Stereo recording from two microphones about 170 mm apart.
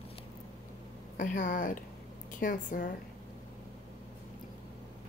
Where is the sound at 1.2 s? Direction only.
50° left (ahead or behind).